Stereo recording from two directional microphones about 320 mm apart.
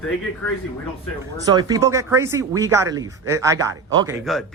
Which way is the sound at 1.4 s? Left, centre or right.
Centre.